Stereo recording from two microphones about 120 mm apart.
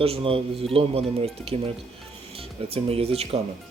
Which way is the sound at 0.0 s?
55° right (ahead or behind).